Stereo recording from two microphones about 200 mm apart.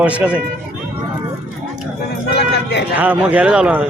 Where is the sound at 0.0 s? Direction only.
5° right (ahead or behind).